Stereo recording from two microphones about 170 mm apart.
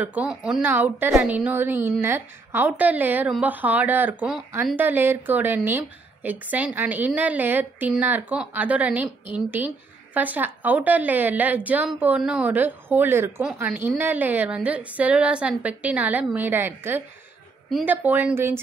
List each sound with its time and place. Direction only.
0.0 s a woman's voice: 10° right (ahead or behind)